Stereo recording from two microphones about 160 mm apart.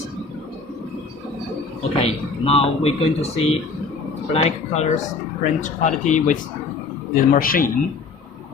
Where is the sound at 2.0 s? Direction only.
40° left (ahead or behind).